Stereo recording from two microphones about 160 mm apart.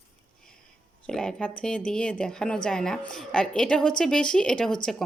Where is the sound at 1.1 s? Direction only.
5° left (ahead or behind).